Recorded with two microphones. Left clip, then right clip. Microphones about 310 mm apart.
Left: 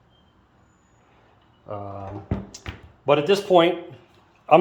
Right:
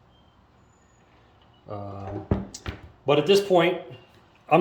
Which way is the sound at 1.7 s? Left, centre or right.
Centre.